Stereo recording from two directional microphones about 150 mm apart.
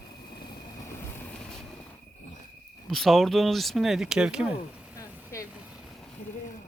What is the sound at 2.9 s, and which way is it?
Speech, centre (ahead or behind).